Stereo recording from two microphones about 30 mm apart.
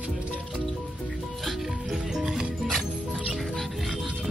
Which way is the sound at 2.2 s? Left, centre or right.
Centre.